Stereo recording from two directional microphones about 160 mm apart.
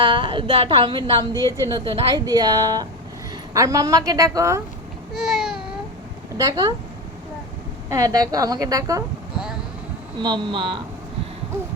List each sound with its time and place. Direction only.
0.0 s a woman's voice: 30° right (ahead or behind)
1.5 s a woman's voice: 20° right (ahead or behind)
5.1 s a sound: centre (ahead or behind)
6.3 s a woman's voice: 20° right (ahead or behind)
7.9 s a woman's voice: 20° right (ahead or behind)
10.2 s a woman's voice: 30° right (ahead or behind)